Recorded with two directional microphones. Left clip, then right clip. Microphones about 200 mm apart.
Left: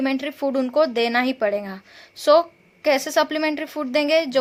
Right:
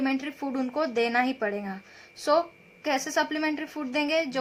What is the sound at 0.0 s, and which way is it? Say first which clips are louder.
A woman's voice: left 6 dB; 35° left (ahead or behind).